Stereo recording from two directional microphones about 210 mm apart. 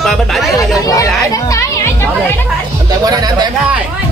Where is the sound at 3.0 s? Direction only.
20° right (ahead or behind).